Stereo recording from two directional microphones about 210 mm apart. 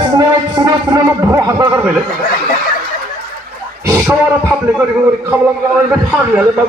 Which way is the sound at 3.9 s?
10° right (ahead or behind).